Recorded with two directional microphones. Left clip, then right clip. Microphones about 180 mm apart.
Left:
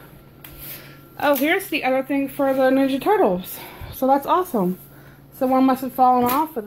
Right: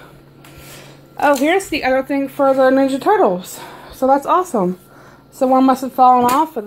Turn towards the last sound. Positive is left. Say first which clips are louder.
# right 6 dB
turn(degrees=-15)  # may be behind; listen again after turning